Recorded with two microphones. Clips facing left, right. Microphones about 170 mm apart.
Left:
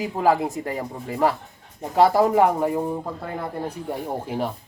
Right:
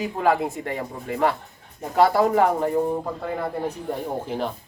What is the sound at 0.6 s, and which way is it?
Speech, 35° left (ahead or behind).